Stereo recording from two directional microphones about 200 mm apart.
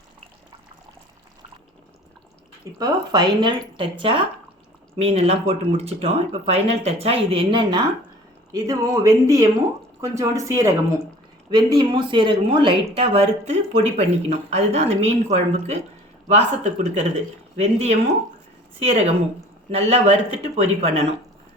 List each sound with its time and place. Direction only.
2.7 s speech: 20° right (ahead or behind)